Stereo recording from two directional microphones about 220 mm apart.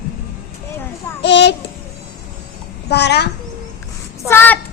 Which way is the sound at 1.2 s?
50° left (ahead or behind).